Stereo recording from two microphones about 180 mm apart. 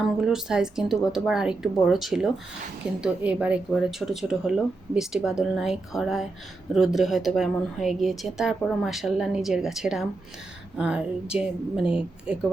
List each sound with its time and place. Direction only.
0.0 s a woman's voice: centre (ahead or behind)